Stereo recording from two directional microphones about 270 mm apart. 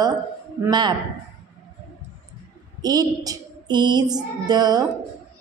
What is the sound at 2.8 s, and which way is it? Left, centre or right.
A woman's voice, centre.